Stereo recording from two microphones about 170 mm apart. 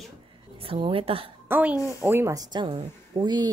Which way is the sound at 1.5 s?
10° right (ahead or behind).